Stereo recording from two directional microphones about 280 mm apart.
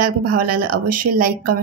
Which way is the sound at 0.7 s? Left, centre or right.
Right.